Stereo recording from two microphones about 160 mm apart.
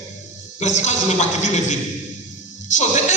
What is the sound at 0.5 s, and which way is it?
Speech, 45° left (ahead or behind).